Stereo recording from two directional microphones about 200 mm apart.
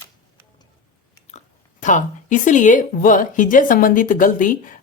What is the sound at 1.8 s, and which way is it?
A woman's voice, 40° left (ahead or behind).